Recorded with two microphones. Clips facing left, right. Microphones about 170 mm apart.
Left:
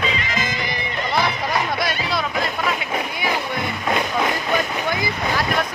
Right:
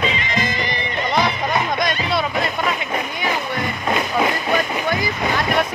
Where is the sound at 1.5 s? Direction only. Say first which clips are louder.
Right 2 dB; 5° left (ahead or behind).